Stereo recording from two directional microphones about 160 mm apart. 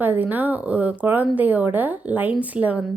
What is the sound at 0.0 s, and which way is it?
Speech, 10° right (ahead or behind).